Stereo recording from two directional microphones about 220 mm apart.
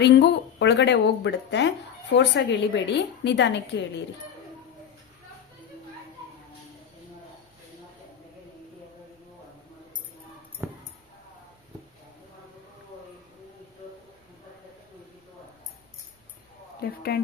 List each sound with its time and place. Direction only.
0.0 s speech: 50° left (ahead or behind)
16.8 s speech: 45° left (ahead or behind)